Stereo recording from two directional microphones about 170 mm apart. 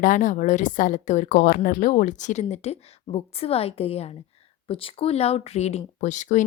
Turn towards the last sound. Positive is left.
turn(degrees=45)  # may be behind; listen again after turning